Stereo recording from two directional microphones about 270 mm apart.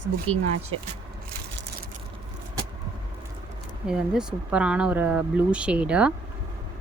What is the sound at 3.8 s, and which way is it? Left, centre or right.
Speech, centre.